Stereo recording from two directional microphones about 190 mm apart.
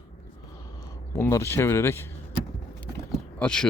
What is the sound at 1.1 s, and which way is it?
Speech, 15° left (ahead or behind).